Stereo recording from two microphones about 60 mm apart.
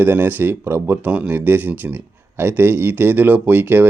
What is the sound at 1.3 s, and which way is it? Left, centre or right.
Speech, right.